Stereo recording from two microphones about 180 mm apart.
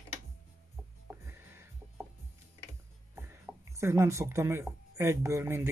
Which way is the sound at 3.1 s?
15° right (ahead or behind).